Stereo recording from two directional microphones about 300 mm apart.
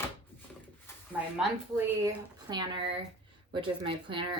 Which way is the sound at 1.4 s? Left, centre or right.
Centre.